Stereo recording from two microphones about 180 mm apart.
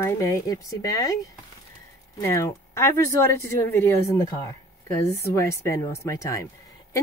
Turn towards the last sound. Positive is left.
turn(degrees=15)  # may be behind; listen again after turning